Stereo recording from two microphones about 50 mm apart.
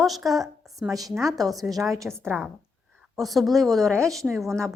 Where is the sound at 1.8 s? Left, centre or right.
Right.